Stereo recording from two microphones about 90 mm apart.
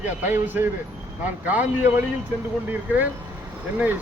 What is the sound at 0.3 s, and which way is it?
Speech, 20° right (ahead or behind).